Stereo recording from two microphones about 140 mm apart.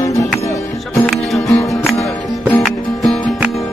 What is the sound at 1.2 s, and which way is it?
Music, centre (ahead or behind).